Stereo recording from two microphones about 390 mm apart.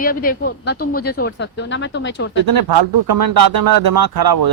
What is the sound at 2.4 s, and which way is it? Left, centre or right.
Speech, right.